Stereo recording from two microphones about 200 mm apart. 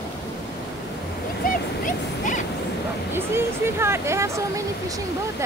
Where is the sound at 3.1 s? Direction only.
10° right (ahead or behind).